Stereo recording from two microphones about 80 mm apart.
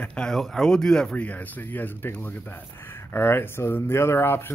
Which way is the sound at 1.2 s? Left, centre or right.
Left.